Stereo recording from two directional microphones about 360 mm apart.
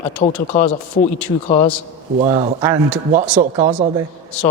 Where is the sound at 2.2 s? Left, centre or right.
Centre.